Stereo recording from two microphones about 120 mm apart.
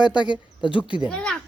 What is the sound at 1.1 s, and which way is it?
Speech, 10° left (ahead or behind).